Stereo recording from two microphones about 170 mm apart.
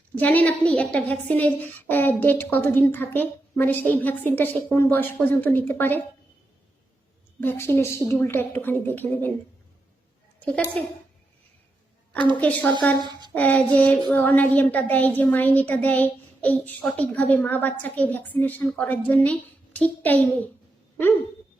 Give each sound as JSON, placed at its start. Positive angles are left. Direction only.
{"t": 0.2, "sound": "a woman's voice", "side_deg": 10}
{"t": 7.4, "sound": "a woman's voice", "side_deg": 15}
{"t": 10.8, "sound": "a woman's voice", "side_deg": 5}
{"t": 12.4, "sound": "a woman's voice", "side_deg": 10}
{"t": 13.0, "sound": "speech", "side_deg": -25}
{"t": 13.3, "sound": "a woman's voice", "side_deg": 10}